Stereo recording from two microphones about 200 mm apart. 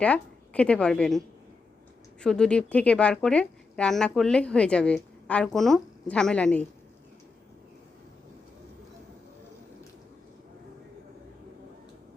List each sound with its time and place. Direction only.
0.0 s a woman's voice: 5° left (ahead or behind)
2.2 s a woman's voice: 5° left (ahead or behind)